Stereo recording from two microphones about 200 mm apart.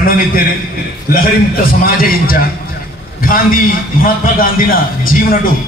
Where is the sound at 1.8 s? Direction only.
45° left (ahead or behind).